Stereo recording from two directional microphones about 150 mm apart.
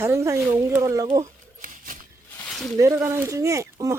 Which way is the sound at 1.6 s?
60° right (ahead or behind).